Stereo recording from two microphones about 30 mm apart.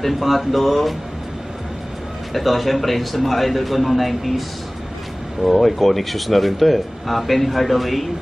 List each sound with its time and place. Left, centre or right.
0.0 s speech: centre
2.3 s speech: centre